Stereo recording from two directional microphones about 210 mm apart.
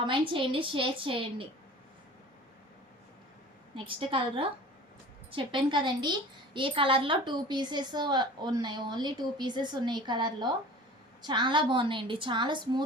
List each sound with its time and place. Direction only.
0.0 s a woman's voice: 25° right (ahead or behind)
3.8 s a woman's voice: 25° right (ahead or behind)